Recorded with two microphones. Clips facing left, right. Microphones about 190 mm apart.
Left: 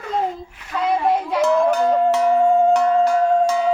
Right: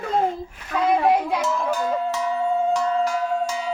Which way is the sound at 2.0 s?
65° left (ahead or behind).